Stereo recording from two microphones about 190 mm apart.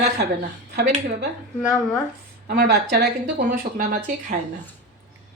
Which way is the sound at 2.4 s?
55° right (ahead or behind).